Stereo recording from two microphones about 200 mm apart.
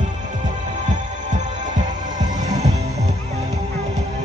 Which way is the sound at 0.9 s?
40° right (ahead or behind).